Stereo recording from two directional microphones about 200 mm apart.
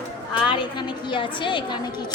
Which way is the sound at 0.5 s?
25° left (ahead or behind).